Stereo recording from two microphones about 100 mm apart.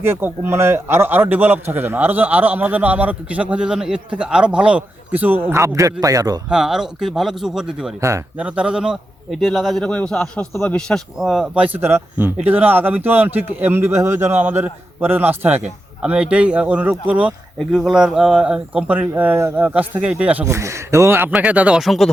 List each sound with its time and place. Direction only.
0.0 s a man's voice: 25° right (ahead or behind); by 6.4 s 40° right (ahead or behind)
6.5 s a man's voice: 5° right (ahead or behind)
11.5 s speech: 15° right (ahead or behind)
20.4 s a man's voice: 30° right (ahead or behind)
21.3 s speech: 15° right (ahead or behind)
21.8 s a man's voice: centre (ahead or behind)